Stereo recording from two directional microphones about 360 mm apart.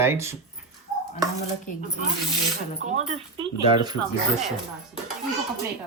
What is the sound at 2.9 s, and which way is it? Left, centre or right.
Speech, centre.